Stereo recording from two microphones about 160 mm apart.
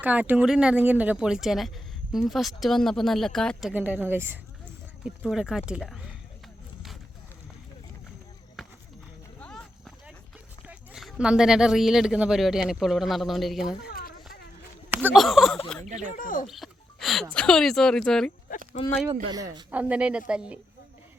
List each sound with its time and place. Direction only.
0.0 s speech: 10° right (ahead or behind)
3.7 s speech: 10° right (ahead or behind)
8.6 s run: centre (ahead or behind)
10.7 s speech: 5° right (ahead or behind)
13.8 s a sound: 65° left (ahead or behind)
14.8 s a sound: 10° right (ahead or behind)
15.1 s speech: centre (ahead or behind)
15.9 s speech: 50° right (ahead or behind)
16.1 s speech: 55° left (ahead or behind)
16.5 s music: centre (ahead or behind)
17.3 s speech: 5° left (ahead or behind)
19.7 s speech: 10° right (ahead or behind)